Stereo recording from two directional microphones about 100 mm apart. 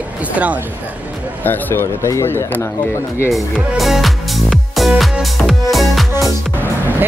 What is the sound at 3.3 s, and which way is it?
Speech, centre (ahead or behind).